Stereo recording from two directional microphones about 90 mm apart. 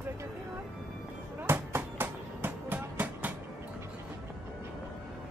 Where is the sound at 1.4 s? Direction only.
25° right (ahead or behind).